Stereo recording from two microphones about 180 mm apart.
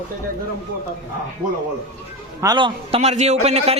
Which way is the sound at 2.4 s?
25° right (ahead or behind).